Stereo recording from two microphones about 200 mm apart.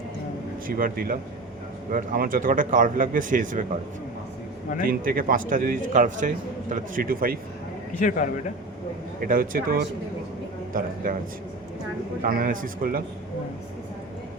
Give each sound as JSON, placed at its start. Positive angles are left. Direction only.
{"t": 0.7, "sound": "speech", "side_deg": -45}
{"t": 4.9, "sound": "speech", "side_deg": -45}
{"t": 7.9, "sound": "a man's voice", "side_deg": 40}
{"t": 9.2, "sound": "speech", "side_deg": -45}
{"t": 12.2, "sound": "speech", "side_deg": -45}